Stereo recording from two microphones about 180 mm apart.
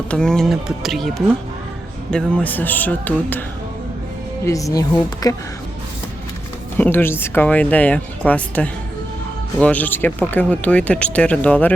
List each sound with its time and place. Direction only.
0.1 s speech: 5° left (ahead or behind)
4.4 s speech: 20° left (ahead or behind)
6.7 s speech: 10° left (ahead or behind)